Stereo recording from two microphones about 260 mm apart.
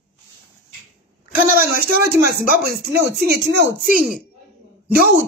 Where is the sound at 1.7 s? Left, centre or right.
Right.